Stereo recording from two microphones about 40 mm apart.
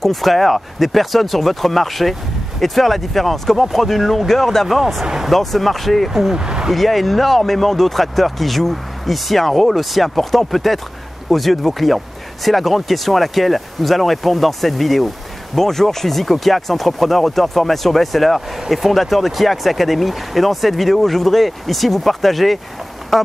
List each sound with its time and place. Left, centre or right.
0.0 s speech: centre
5.0 s speech: centre
5.3 s speech: centre
6.3 s speech: centre
6.7 s speech: centre